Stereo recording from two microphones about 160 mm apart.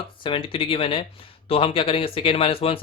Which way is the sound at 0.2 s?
35° left (ahead or behind).